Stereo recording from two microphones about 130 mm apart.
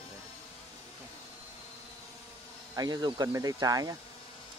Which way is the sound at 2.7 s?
30° right (ahead or behind).